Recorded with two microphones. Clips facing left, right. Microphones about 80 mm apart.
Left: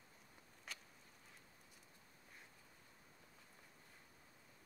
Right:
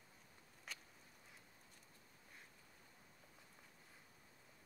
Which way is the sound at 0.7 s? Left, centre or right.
Centre.